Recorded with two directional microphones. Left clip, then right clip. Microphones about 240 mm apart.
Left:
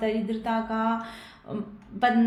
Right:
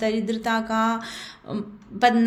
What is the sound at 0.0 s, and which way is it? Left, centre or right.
Speech, right.